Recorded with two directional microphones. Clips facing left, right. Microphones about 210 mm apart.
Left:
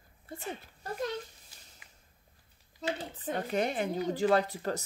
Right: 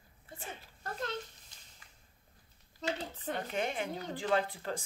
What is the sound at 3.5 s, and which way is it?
Speech, 40° left (ahead or behind).